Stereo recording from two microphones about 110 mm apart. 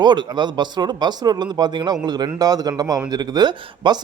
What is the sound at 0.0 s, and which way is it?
Speech, 45° right (ahead or behind).